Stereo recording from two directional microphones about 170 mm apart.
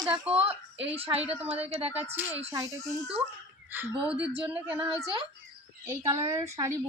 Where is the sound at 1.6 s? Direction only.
35° right (ahead or behind).